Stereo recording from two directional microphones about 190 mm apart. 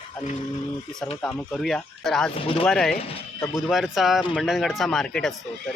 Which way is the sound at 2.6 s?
Centre (ahead or behind).